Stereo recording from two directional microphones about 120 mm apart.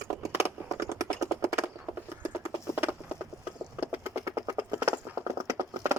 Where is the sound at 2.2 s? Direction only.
20° right (ahead or behind).